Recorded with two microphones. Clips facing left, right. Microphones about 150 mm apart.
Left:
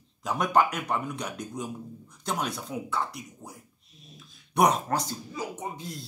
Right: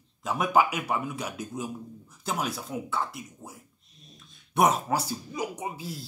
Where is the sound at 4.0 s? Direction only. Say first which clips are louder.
Left 2 dB; centre (ahead or behind).